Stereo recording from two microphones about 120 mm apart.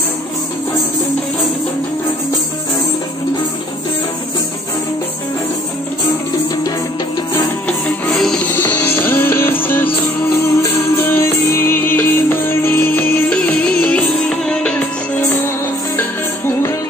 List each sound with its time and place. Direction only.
8.1 s music: 5° left (ahead or behind)
8.5 s music: 15° left (ahead or behind)
16.0 s music: 20° left (ahead or behind)